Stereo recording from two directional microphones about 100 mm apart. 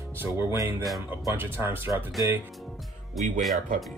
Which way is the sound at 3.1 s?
Centre (ahead or behind).